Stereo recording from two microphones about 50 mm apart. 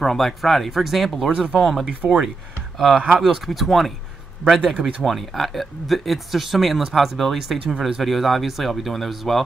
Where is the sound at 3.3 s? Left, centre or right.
Centre.